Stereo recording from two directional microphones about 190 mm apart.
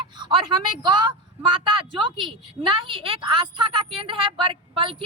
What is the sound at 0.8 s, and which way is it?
A woman's voice, 25° right (ahead or behind).